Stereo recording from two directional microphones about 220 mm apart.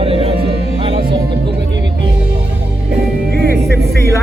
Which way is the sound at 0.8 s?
25° right (ahead or behind).